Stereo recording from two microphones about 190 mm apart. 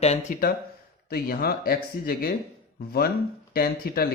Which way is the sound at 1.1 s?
55° left (ahead or behind).